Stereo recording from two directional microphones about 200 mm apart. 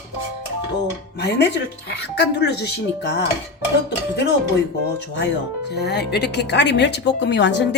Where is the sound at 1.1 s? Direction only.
55° left (ahead or behind).